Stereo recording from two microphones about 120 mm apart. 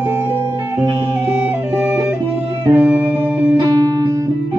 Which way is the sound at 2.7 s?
15° right (ahead or behind).